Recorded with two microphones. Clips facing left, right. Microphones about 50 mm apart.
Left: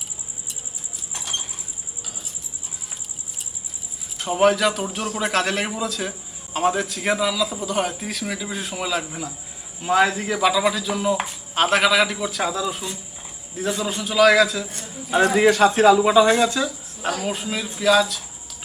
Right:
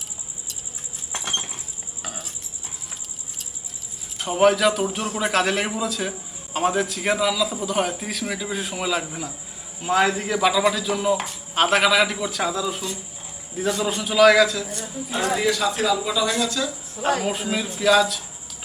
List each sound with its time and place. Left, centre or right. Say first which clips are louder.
1.1 s a sound: right 3 dB; right
4.2 s a man's voice: even; centre
13.8 s a man's voice: right 1 dB; centre
15.4 s speech: left 9 dB; left
17.2 s a man's voice: right 1 dB; centre